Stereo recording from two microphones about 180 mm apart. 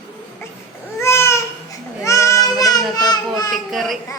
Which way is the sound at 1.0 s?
15° left (ahead or behind).